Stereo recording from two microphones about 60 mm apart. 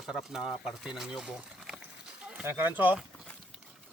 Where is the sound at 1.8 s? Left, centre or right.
Centre.